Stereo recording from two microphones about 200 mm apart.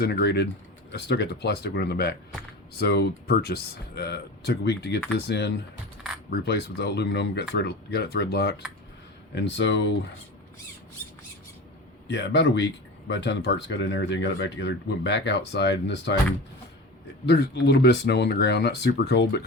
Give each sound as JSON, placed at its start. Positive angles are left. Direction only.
{"t": 0.0, "sound": "speech", "side_deg": 55}
{"t": 12.0, "sound": "speech", "side_deg": 60}
{"t": 17.2, "sound": "speech", "side_deg": 55}